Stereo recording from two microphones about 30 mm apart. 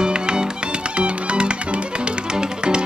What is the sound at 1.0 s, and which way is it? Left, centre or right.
Music, right.